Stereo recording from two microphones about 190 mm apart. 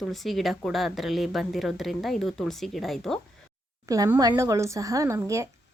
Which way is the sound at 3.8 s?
20° right (ahead or behind).